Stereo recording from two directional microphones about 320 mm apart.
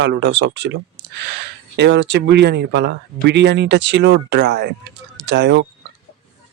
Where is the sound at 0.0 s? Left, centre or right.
Right.